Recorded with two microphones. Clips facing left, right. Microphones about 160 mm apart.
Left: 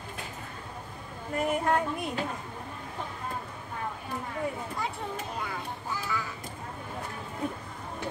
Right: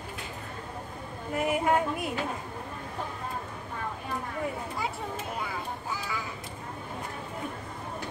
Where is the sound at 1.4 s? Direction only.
10° right (ahead or behind).